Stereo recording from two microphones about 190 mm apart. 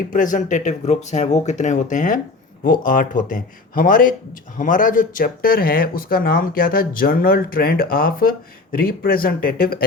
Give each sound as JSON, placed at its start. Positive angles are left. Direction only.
{"t": 0.1, "sound": "speech", "side_deg": 45}